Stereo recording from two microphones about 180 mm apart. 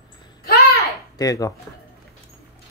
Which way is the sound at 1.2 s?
20° left (ahead or behind).